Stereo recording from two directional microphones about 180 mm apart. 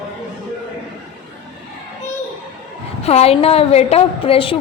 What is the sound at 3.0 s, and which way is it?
A woman's voice, 35° left (ahead or behind).